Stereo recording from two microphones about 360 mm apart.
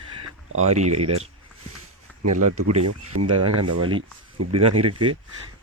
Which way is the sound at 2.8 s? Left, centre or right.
Right.